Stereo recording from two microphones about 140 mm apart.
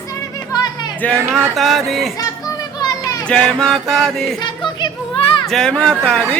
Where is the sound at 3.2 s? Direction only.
5° left (ahead or behind).